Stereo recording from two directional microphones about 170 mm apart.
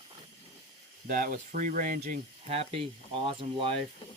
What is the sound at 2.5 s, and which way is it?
Speech, 35° right (ahead or behind).